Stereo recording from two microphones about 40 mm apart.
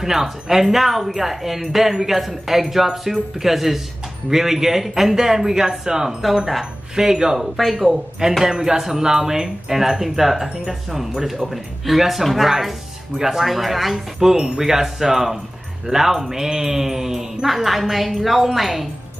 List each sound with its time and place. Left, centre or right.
0.0 s speech: centre
8.5 s speech: centre